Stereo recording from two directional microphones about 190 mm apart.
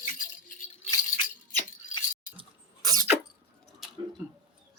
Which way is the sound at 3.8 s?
5° right (ahead or behind).